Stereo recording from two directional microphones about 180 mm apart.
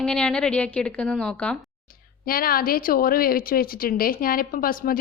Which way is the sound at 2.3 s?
55° left (ahead or behind).